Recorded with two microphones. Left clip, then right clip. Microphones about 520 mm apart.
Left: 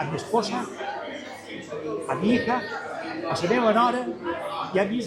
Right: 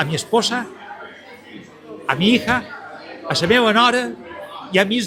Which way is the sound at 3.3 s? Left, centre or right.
Right.